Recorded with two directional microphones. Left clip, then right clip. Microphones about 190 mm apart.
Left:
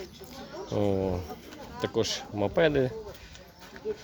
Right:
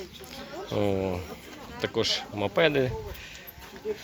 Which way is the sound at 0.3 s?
15° left (ahead or behind).